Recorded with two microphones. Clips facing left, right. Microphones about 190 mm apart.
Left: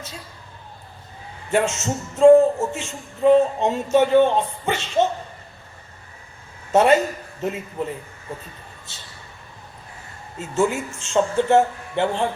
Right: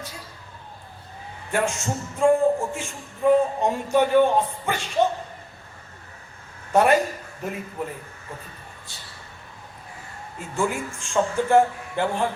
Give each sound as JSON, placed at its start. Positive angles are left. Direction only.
{"t": 1.5, "sound": "speech", "side_deg": 20}
{"t": 6.7, "sound": "a man's voice", "side_deg": 20}
{"t": 10.3, "sound": "speech", "side_deg": 20}